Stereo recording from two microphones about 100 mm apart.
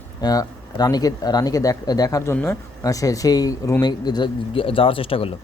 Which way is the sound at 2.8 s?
35° left (ahead or behind).